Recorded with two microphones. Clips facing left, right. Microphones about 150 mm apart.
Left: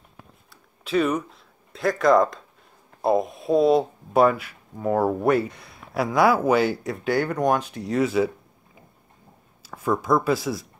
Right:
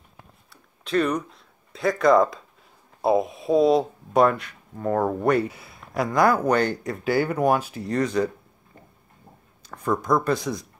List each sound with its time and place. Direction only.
0.2 s a sound: centre (ahead or behind)
3.0 s speech: centre (ahead or behind)
9.6 s speech: 5° left (ahead or behind)